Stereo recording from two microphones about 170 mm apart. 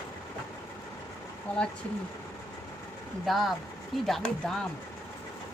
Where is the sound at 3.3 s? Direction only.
Centre (ahead or behind).